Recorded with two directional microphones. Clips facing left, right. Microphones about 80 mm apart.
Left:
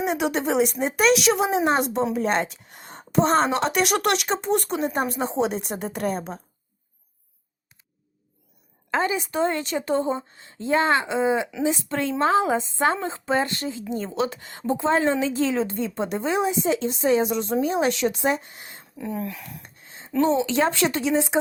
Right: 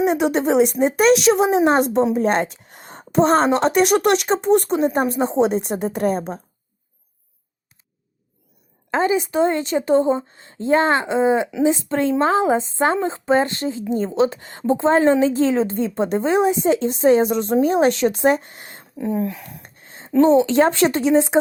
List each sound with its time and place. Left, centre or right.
0.0 s a woman's voice: right
8.9 s a woman's voice: right
18.9 s a woman's voice: right
19.6 s a sound: right
20.2 s a woman's voice: right